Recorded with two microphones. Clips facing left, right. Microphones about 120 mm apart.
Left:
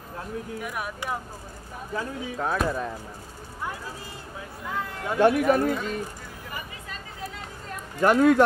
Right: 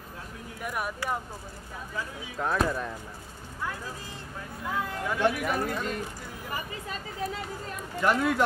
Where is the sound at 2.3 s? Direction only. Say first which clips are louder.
Even; 5° left (ahead or behind).